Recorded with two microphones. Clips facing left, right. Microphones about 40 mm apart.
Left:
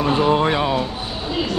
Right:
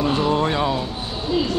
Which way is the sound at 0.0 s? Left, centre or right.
Left.